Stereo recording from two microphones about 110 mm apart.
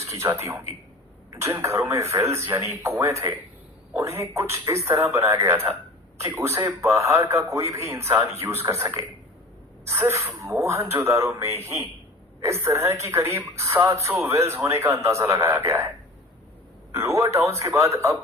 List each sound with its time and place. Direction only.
0.1 s speech: 25° right (ahead or behind)
16.9 s speech: 25° right (ahead or behind)